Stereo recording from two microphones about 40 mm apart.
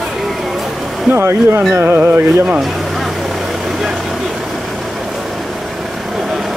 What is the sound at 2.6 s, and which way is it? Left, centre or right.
Vehicle, centre.